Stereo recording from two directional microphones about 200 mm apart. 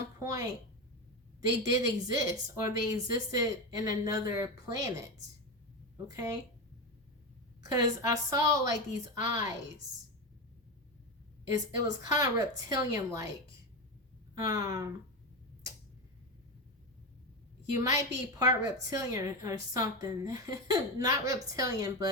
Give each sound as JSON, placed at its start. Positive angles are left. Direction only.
{"t": 0.2, "sound": "a woman's voice", "side_deg": -15}
{"t": 7.6, "sound": "a woman's voice", "side_deg": -15}
{"t": 11.5, "sound": "a woman's voice", "side_deg": -20}
{"t": 14.3, "sound": "speech", "side_deg": -20}
{"t": 17.8, "sound": "a woman's voice", "side_deg": -15}